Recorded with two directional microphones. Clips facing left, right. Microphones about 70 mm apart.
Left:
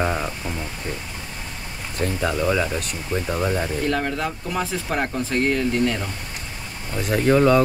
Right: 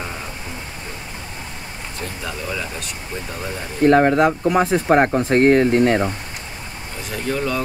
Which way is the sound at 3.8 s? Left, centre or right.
Right.